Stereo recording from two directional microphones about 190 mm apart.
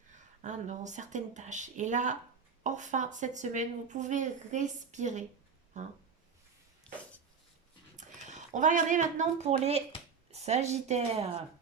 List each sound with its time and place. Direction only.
0.2 s a woman's voice: 40° right (ahead or behind)
6.9 s a sound: 5° left (ahead or behind)
7.9 s a woman's voice: 40° right (ahead or behind)